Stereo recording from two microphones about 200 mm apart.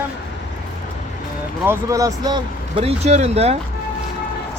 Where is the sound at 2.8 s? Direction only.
30° right (ahead or behind).